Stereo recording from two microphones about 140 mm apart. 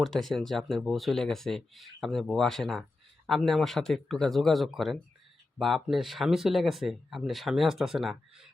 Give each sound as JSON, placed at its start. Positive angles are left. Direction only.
{"t": 0.0, "sound": "speech", "side_deg": 0}